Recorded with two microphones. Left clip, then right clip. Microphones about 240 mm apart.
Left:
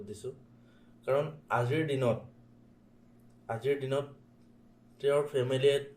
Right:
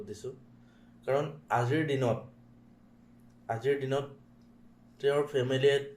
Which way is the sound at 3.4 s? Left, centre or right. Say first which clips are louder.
Right 2 dB; centre.